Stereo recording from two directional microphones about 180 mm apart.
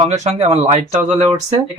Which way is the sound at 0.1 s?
35° right (ahead or behind).